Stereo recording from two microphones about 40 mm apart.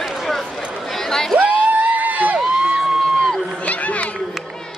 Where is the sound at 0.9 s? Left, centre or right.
Centre.